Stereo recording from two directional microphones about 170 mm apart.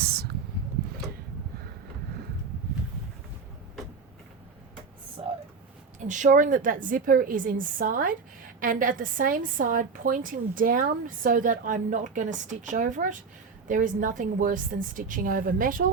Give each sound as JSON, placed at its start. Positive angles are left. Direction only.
{"t": 6.0, "sound": "a woman's voice", "side_deg": -45}